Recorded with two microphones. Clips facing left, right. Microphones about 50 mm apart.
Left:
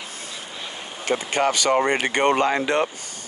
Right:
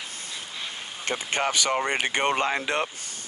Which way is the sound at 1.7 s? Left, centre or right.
Left.